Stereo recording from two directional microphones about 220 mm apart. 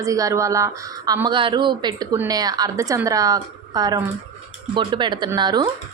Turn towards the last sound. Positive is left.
turn(degrees=-20)  # may be behind; listen again after turning